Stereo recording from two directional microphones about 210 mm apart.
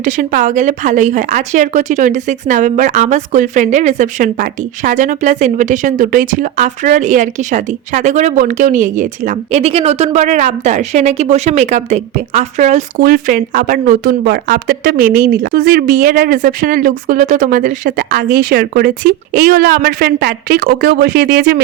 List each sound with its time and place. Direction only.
0.0 s speech: 40° right (ahead or behind)